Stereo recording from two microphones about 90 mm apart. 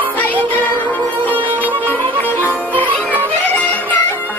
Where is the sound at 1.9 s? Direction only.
20° left (ahead or behind).